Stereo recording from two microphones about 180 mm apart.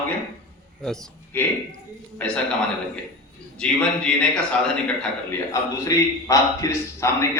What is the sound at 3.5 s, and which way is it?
A man's voice, 5° left (ahead or behind).